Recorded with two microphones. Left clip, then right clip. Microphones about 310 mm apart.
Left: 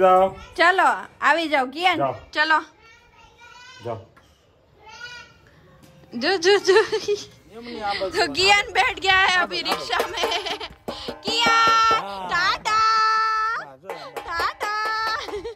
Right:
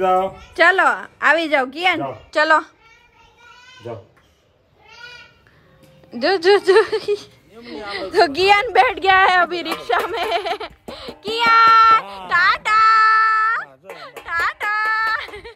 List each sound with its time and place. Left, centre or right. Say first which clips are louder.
0.0 s a woman's voice: left 2 dB; centre
6.0 s a woman's voice: right 4 dB; centre
9.8 s music: right 4 dB; centre
14.2 s a sound: right 5 dB; centre